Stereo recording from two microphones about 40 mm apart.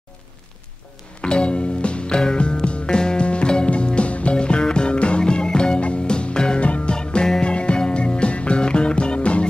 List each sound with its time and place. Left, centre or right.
1.2 s music: left
6.6 s music: left
7.0 s music: left